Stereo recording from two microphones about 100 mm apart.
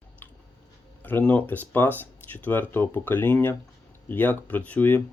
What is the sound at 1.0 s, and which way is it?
Speech, 15° left (ahead or behind).